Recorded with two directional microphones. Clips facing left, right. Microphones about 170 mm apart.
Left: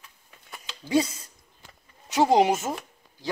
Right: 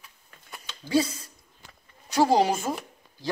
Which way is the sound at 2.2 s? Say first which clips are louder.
Left 1 dB; 20° left (ahead or behind).